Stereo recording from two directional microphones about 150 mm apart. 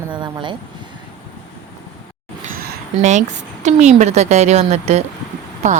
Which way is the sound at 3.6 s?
50° right (ahead or behind).